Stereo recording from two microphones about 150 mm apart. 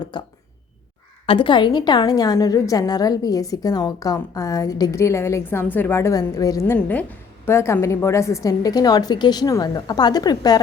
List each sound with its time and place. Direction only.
0.1 s speech: 30° left (ahead or behind)
1.3 s a woman's voice: 35° left (ahead or behind)
6.7 s a woman's voice: 10° left (ahead or behind); by 10.6 s 25° left (ahead or behind)